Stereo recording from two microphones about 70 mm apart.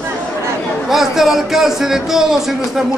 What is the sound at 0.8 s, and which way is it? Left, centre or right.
Speech, centre.